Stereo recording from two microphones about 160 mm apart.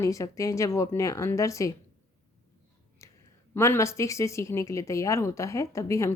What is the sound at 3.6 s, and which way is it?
A woman's voice, 15° left (ahead or behind).